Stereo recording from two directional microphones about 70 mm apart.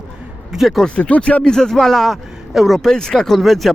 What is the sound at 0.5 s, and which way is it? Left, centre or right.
Speech, centre.